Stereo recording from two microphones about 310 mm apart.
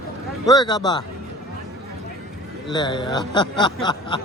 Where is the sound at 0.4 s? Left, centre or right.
Centre.